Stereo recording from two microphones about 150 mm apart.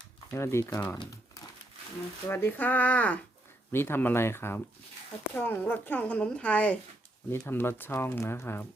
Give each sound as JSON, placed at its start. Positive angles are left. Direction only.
{"t": 0.3, "sound": "speech", "side_deg": 15}
{"t": 2.3, "sound": "speech", "side_deg": 15}